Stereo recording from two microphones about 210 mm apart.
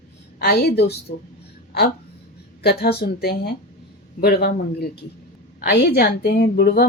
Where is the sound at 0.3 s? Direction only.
50° left (ahead or behind).